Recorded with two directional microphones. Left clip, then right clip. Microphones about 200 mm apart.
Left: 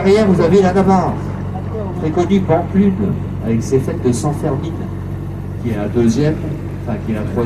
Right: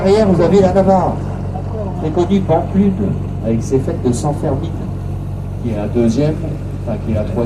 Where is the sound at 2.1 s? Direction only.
55° left (ahead or behind).